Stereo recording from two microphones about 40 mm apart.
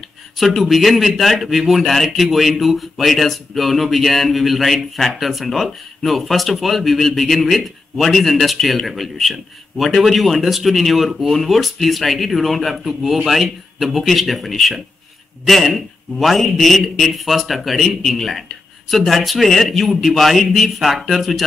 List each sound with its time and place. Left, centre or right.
0.4 s speech: centre